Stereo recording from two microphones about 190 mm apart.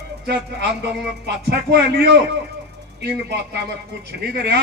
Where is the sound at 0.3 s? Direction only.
60° right (ahead or behind).